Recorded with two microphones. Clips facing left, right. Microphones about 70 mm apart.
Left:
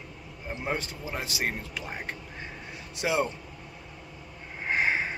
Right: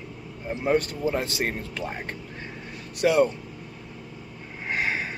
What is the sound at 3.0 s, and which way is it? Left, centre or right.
Speech, centre.